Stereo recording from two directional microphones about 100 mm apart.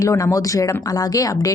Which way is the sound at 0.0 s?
30° left (ahead or behind).